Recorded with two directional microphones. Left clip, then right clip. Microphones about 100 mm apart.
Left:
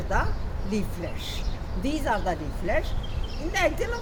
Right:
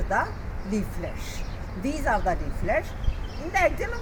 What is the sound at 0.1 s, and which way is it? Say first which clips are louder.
Speech: right 2 dB; 5° left (ahead or behind).